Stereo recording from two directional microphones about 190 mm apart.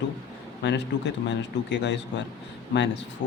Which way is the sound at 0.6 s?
65° left (ahead or behind).